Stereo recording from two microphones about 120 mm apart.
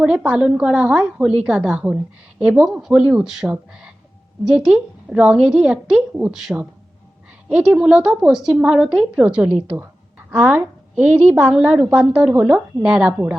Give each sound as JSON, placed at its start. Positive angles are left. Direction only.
{"t": 0.0, "sound": "a woman's voice", "side_deg": -10}